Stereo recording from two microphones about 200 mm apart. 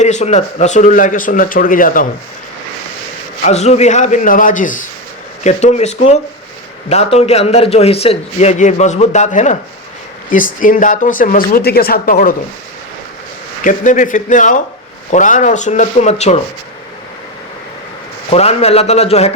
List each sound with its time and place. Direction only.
0.0 s a man's voice: 35° left (ahead or behind)
3.4 s a man's voice: 35° left (ahead or behind)
13.7 s a man's voice: 40° left (ahead or behind)
18.3 s a man's voice: 30° left (ahead or behind)